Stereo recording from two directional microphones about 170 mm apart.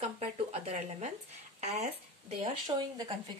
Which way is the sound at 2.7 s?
25° right (ahead or behind).